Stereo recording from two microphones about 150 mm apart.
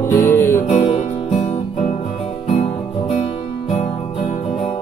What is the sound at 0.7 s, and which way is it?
Music, 45° left (ahead or behind).